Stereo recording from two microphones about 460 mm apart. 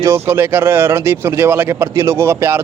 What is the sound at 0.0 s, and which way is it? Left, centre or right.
Speech, centre.